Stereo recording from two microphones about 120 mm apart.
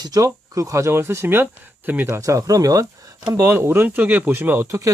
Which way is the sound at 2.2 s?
25° right (ahead or behind).